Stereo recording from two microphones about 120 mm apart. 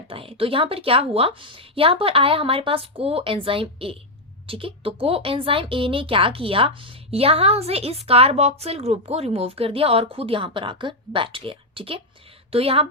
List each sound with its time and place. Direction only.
0.1 s a woman's voice: 50° right (ahead or behind)